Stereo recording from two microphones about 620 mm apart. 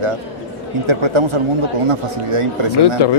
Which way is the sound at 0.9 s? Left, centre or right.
Right.